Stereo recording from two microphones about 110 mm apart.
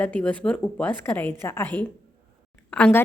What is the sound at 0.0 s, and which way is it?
A woman's voice, 15° left (ahead or behind).